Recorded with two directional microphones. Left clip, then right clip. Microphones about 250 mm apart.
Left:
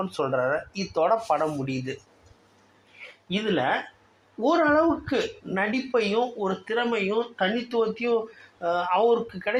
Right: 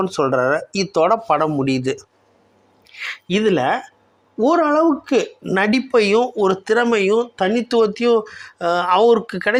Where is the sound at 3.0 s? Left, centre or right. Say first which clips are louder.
Right 12 dB; right.